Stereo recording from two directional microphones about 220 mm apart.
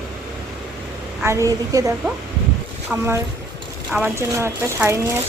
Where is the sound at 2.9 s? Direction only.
10° right (ahead or behind).